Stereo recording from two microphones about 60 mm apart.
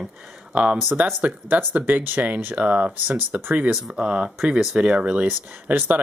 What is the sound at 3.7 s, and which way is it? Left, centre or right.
Speech, centre.